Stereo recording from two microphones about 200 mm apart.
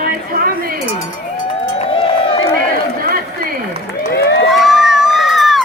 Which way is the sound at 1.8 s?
30° left (ahead or behind).